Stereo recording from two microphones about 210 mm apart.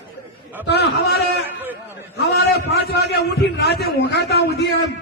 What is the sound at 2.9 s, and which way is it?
Speech, 50° left (ahead or behind).